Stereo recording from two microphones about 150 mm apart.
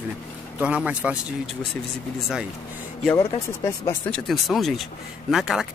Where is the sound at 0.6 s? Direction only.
5° right (ahead or behind).